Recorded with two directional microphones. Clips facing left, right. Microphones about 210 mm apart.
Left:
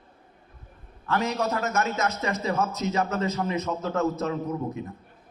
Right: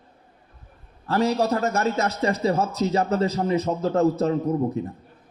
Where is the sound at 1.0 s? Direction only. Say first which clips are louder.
Right 5 dB; 35° right (ahead or behind).